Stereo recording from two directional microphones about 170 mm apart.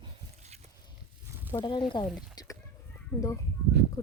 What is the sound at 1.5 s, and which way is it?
Speech, 25° left (ahead or behind).